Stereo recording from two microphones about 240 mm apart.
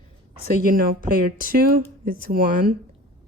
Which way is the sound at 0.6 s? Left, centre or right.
Right.